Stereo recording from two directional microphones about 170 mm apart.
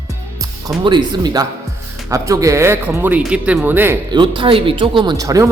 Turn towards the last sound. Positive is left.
turn(degrees=-20)  # may be behind; listen again after turning